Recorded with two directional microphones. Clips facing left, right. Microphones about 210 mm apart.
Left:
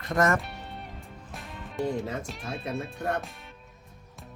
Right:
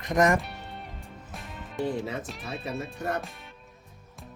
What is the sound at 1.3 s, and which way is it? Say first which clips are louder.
Speech: even; centre (ahead or behind).